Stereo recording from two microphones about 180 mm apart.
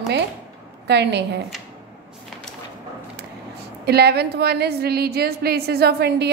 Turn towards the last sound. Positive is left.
turn(degrees=-65)  # may be behind; listen again after turning